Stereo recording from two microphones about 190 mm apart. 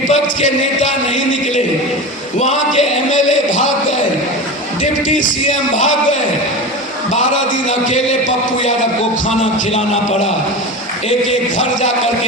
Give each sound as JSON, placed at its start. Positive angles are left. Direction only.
{"t": 0.1, "sound": "music", "side_deg": 40}
{"t": 2.4, "sound": "a sound", "side_deg": 40}
{"t": 4.8, "sound": "music", "side_deg": 45}
{"t": 7.7, "sound": "a man's voice", "side_deg": 35}
{"t": 9.4, "sound": "a man's voice", "side_deg": 35}
{"t": 11.3, "sound": "a man's voice", "side_deg": 40}